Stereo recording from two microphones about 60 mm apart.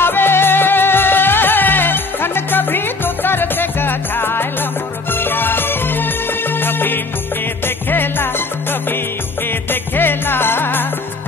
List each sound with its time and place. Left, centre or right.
0.0 s music: left
9.7 s music: left